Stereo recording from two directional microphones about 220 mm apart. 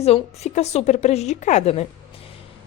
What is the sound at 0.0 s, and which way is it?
A woman's voice, 30° left (ahead or behind).